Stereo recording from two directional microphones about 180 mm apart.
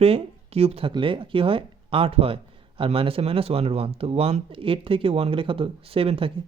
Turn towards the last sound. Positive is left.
turn(degrees=-30)  # may be behind; listen again after turning